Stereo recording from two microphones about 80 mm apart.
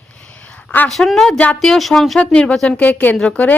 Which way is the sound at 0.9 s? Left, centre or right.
Centre.